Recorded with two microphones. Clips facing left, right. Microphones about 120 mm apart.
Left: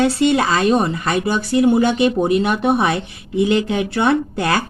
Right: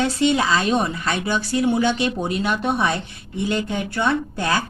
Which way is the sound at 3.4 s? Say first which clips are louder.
Left 7 dB; 85° left.